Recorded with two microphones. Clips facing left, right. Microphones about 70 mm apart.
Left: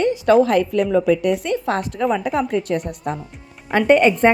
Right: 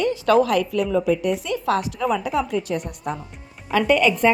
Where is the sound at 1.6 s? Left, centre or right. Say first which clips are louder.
Right 1 dB; left.